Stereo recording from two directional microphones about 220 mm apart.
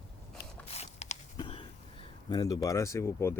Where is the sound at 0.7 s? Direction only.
30° left (ahead or behind).